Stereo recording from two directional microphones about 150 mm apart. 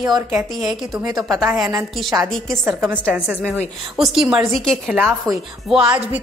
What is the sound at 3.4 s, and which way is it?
A woman's voice, 5° left (ahead or behind).